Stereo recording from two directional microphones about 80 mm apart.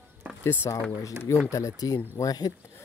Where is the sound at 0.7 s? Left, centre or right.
Left.